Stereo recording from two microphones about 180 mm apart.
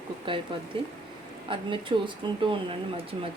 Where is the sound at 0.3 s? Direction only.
30° right (ahead or behind).